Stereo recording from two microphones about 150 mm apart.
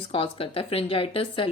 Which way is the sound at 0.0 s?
35° left (ahead or behind).